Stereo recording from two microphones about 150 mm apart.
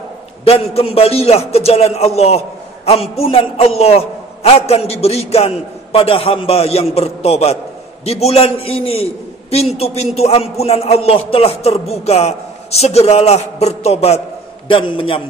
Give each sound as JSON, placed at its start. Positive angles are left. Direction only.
{"t": 0.5, "sound": "a man's voice", "side_deg": 40}
{"t": 14.7, "sound": "a man's voice", "side_deg": 35}